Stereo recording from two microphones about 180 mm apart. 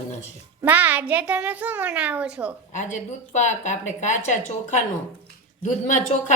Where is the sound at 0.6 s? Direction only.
10° right (ahead or behind).